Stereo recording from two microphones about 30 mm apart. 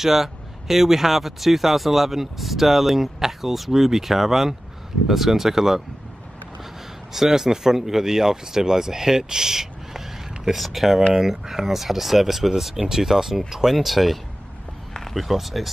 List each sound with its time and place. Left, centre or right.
0.0 s speech: centre